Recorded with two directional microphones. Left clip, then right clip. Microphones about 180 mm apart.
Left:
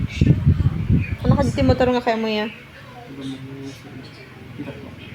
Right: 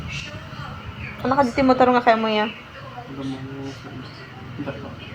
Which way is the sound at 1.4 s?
50° left (ahead or behind).